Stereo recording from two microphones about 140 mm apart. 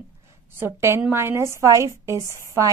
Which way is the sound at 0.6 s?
15° right (ahead or behind).